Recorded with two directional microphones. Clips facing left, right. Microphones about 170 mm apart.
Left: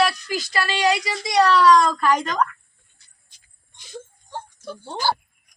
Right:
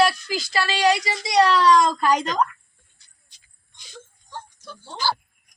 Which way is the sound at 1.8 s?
15° right (ahead or behind).